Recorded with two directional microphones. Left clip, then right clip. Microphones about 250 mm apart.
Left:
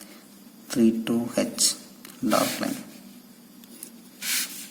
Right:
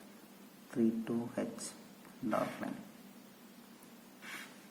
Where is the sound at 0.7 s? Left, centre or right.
Left.